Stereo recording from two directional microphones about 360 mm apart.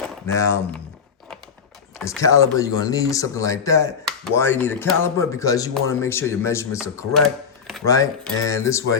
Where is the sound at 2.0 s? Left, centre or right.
Centre.